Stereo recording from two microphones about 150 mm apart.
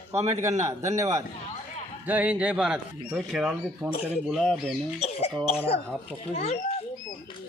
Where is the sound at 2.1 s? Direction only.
10° right (ahead or behind).